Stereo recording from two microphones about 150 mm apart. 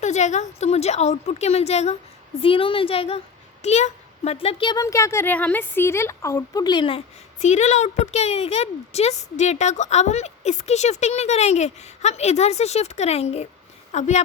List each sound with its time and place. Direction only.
0.0 s a child's voice: 50° left (ahead or behind); by 4.8 s 35° left (ahead or behind)
4.8 s a woman's voice: 20° left (ahead or behind)
7.3 s speech: 50° left (ahead or behind)